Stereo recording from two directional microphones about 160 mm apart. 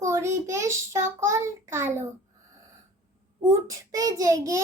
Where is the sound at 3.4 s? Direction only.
20° right (ahead or behind).